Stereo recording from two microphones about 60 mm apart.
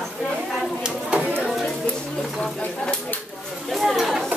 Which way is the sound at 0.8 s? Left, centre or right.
Centre.